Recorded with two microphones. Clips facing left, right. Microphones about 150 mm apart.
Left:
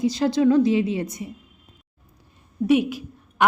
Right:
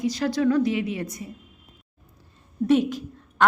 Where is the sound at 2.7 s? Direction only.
10° left (ahead or behind).